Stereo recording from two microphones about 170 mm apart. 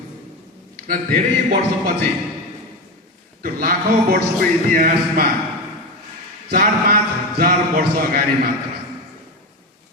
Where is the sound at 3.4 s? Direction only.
60° right (ahead or behind).